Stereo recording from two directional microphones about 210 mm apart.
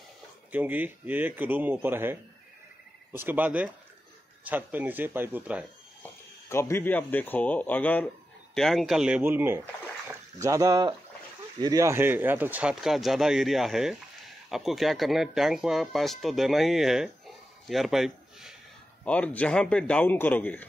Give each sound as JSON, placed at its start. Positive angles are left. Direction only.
{"t": 0.5, "sound": "speech", "side_deg": -10}
{"t": 6.5, "sound": "a man's voice", "side_deg": 10}